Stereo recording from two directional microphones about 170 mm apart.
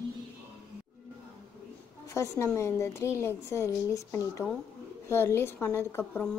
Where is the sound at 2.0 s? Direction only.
15° left (ahead or behind).